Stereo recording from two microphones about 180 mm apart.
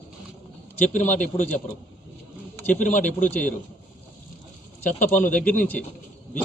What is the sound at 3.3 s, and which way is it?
Speech, 10° left (ahead or behind).